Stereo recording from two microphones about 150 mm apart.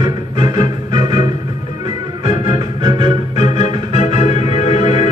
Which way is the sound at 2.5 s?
30° right (ahead or behind).